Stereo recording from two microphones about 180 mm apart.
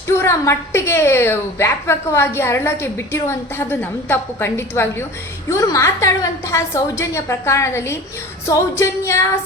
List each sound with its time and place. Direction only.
0.1 s a woman's voice: 15° left (ahead or behind)